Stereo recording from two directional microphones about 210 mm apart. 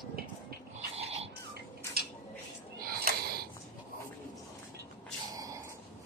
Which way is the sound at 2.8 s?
45° right (ahead or behind).